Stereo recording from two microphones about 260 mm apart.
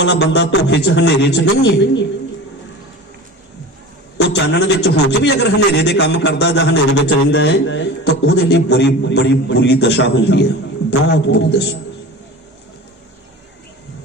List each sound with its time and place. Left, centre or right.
0.0 s a man's voice: left
4.2 s a man's voice: left